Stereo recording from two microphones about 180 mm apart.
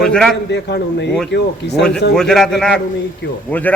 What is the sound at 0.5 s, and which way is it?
Speech, 70° left (ahead or behind).